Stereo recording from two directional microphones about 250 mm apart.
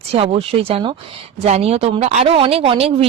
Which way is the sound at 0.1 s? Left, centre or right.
Right.